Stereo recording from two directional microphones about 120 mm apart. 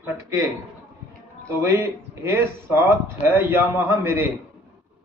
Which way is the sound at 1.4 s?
25° right (ahead or behind).